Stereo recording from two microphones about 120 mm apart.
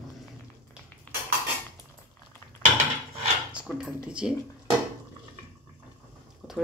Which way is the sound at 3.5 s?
10° right (ahead or behind).